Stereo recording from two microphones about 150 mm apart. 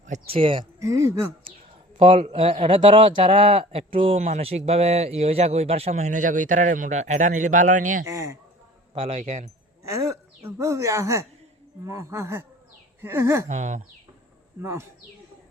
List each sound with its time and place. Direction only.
0.1 s a man's voice: 40° right (ahead or behind)
0.8 s a woman's voice: 20° right (ahead or behind)
2.0 s a man's voice: 35° right (ahead or behind); by 8.0 s 60° right (ahead or behind)
8.0 s a woman's voice: 20° right (ahead or behind)
9.0 s speech: 45° right (ahead or behind)
9.9 s a woman's voice: 20° right (ahead or behind)
13.5 s speech: 50° right (ahead or behind)
14.6 s speech: 15° right (ahead or behind)